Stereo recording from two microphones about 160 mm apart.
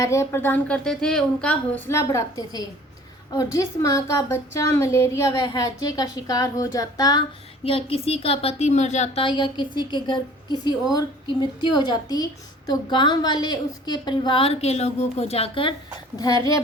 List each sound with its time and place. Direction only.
0.0 s a woman's voice: 20° left (ahead or behind)
7.6 s a woman's voice: 35° left (ahead or behind)
9.2 s a woman's voice: 30° left (ahead or behind)
16.1 s a woman's voice: 25° left (ahead or behind)